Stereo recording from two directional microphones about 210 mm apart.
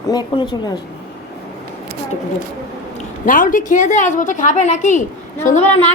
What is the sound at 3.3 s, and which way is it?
A woman's voice, 40° left (ahead or behind).